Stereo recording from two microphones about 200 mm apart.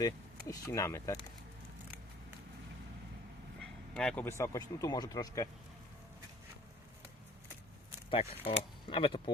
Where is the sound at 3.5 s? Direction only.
5° left (ahead or behind).